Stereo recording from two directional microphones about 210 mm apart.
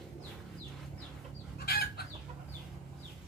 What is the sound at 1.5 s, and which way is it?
Chicken, 45° left (ahead or behind).